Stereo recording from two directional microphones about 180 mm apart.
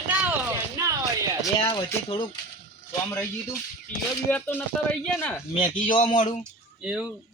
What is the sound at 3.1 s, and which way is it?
Speech, 10° left (ahead or behind).